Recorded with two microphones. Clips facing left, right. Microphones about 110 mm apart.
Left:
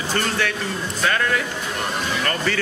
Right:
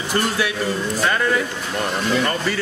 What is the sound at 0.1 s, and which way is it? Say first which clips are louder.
Speech: right 2 dB; 10° right (ahead or behind).